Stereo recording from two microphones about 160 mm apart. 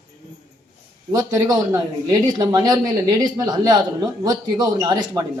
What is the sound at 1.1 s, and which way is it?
A man's voice, 25° right (ahead or behind).